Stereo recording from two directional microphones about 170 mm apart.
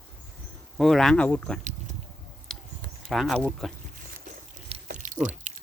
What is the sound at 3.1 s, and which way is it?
Speech, centre (ahead or behind).